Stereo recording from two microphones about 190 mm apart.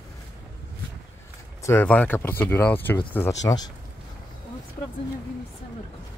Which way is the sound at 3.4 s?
20° left (ahead or behind).